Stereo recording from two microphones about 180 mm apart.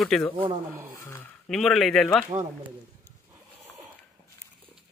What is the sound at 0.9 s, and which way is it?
Speech, 15° left (ahead or behind).